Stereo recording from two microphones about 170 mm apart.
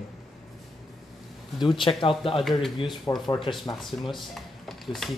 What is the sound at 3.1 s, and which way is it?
Speech, 20° left (ahead or behind).